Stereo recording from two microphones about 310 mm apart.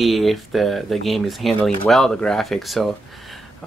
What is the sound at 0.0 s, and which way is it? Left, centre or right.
Speech, centre.